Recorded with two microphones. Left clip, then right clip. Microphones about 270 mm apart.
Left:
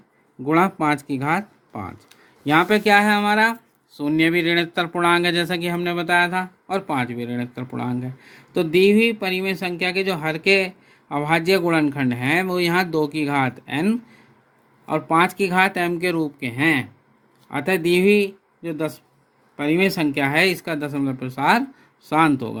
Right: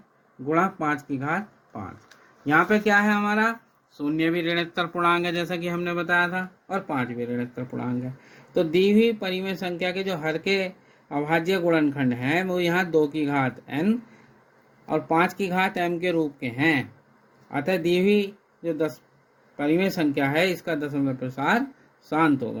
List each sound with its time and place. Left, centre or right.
0.4 s speech: left